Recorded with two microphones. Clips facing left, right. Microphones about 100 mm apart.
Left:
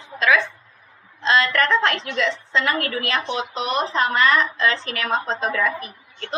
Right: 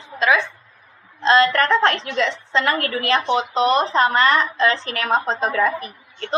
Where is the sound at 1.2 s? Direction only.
35° right (ahead or behind).